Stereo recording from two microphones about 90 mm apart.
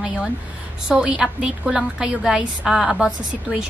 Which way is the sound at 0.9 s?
10° right (ahead or behind).